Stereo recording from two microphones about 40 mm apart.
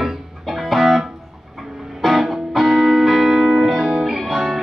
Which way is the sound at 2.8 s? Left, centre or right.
Centre.